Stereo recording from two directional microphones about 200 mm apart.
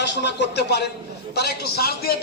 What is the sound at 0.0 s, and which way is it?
A man's voice, 60° left (ahead or behind).